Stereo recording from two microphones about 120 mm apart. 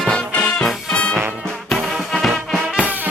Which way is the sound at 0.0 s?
5° left (ahead or behind).